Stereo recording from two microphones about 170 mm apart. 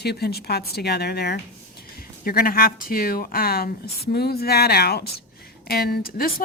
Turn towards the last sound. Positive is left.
turn(degrees=60)  # may be behind; listen again after turning